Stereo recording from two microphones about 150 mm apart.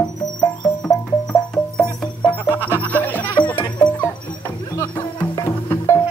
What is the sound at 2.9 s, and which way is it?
Music, 10° left (ahead or behind).